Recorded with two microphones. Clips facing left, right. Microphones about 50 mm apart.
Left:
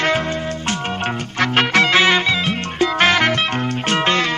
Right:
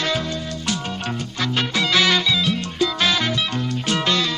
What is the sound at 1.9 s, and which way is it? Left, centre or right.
Music, left.